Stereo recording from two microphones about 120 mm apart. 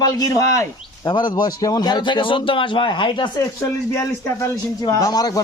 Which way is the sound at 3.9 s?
25° left (ahead or behind).